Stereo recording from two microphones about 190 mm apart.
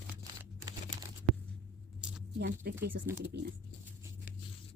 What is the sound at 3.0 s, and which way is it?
Speech, 10° right (ahead or behind).